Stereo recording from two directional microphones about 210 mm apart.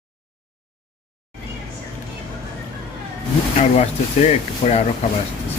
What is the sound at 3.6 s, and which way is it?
Speech, 30° left (ahead or behind).